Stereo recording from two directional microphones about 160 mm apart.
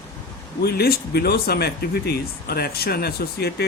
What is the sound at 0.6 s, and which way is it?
Speech, 80° left.